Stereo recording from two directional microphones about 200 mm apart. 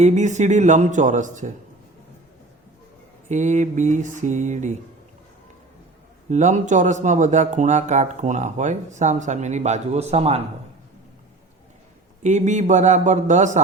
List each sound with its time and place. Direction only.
0.0 s speech: 35° right (ahead or behind)
3.2 s speech: 35° right (ahead or behind)
6.3 s speech: 35° right (ahead or behind)
12.2 s speech: 35° right (ahead or behind)